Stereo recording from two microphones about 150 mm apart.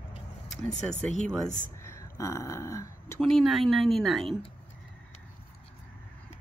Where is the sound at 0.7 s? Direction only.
50° left (ahead or behind).